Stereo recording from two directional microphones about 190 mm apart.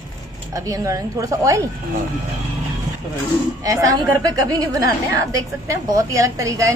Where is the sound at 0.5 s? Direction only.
15° right (ahead or behind).